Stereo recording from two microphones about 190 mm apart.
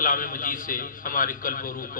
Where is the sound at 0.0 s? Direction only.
45° left (ahead or behind).